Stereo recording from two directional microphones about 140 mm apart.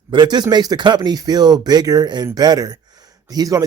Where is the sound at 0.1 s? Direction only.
30° right (ahead or behind).